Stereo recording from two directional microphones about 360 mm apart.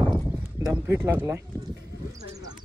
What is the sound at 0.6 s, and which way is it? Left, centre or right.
Speech, centre.